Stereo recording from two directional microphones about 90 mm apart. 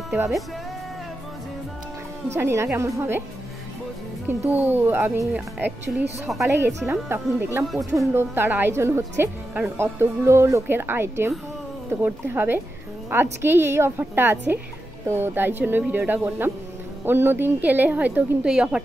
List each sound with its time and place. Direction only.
2.3 s a woman's voice: 30° right (ahead or behind)
4.3 s a woman's voice: 20° right (ahead or behind)
5.3 s speech: 15° right (ahead or behind)
6.4 s a woman's voice: 30° right (ahead or behind); by 18.8 s 10° right (ahead or behind)